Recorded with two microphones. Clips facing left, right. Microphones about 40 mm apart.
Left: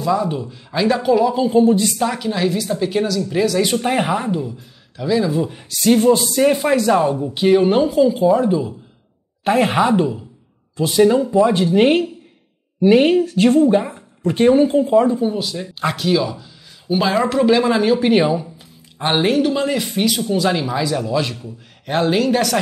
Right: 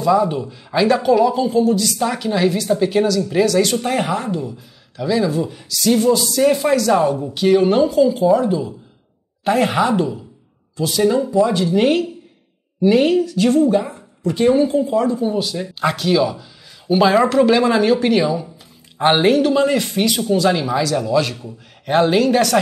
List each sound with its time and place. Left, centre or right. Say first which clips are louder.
0.0 s speech: right 3 dB; centre
1.5 s speech: left 2 dB; left
2.0 s speech: right 2 dB; centre
3.6 s speech: left 1 dB; centre
5.5 s speech: left 2 dB; left
6.4 s speech: right 1 dB; centre
6.9 s speech: even; centre
7.3 s speech: even; centre
10.8 s speech: left 3 dB; left
15.2 s speech: right 1 dB; centre
18.1 s speech: left 2 dB; left
18.9 s speech: right 4 dB; centre
19.2 s speech: right 3 dB; centre
21.4 s speech: even; centre